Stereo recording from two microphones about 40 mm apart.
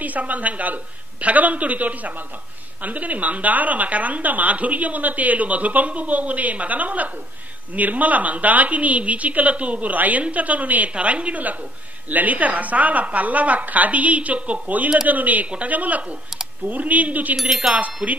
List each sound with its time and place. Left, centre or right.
0.0 s a woman's voice: right
12.1 s a woman's voice: right
17.6 s a sound: centre
18.0 s a woman's voice: right